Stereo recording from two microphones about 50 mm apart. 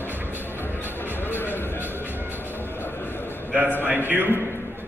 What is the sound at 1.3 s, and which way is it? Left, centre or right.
Music, left.